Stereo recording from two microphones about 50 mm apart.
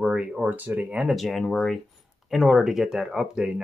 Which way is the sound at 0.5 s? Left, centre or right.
Right.